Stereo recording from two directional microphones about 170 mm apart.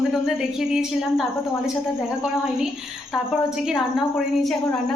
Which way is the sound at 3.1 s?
Centre (ahead or behind).